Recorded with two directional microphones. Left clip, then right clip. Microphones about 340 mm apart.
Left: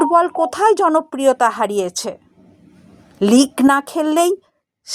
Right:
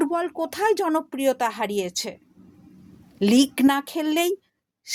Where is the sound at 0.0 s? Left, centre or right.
Right.